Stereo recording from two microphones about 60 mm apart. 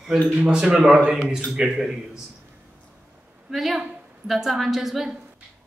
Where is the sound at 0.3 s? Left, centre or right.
Right.